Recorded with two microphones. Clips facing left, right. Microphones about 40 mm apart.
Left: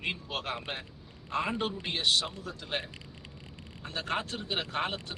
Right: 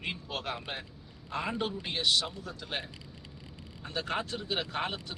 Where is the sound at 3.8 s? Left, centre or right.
Centre.